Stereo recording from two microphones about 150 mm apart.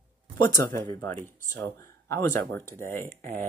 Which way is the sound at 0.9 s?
15° left (ahead or behind).